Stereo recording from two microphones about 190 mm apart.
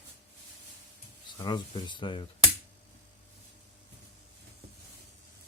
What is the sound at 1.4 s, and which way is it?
Speech, 25° left (ahead or behind).